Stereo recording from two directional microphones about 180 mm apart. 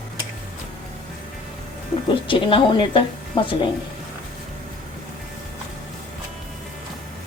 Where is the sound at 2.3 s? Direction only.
30° left (ahead or behind).